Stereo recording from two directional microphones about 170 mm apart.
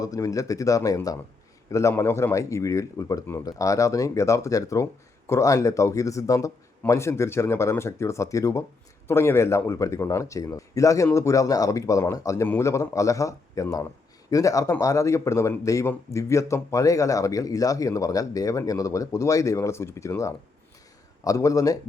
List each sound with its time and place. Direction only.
0.0 s a man's voice: 20° left (ahead or behind)